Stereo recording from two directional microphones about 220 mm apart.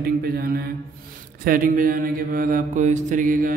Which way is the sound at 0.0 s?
45° right (ahead or behind).